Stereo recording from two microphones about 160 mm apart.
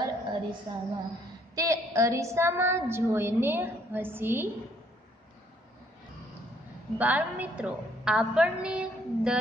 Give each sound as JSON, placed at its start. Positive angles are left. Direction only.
{"t": 0.0, "sound": "a sound", "side_deg": -30}
{"t": 1.5, "sound": "a woman's voice", "side_deg": -20}
{"t": 7.0, "sound": "a woman's voice", "side_deg": -10}